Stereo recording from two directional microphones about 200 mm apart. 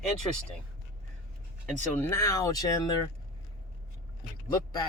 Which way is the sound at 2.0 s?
15° left (ahead or behind).